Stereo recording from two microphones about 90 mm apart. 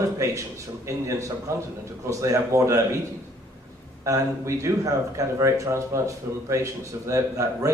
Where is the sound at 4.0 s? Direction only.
35° right (ahead or behind).